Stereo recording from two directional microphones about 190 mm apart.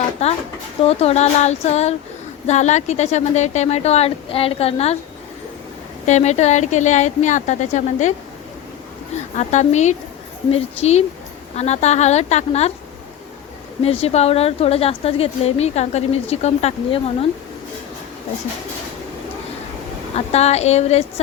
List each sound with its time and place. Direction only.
0.2 s speech: 30° left (ahead or behind)
6.1 s speech: 35° left (ahead or behind)
9.4 s speech: 40° left (ahead or behind)
11.5 s speech: 35° left (ahead or behind)
13.8 s speech: 30° left (ahead or behind)
20.1 s speech: 35° left (ahead or behind)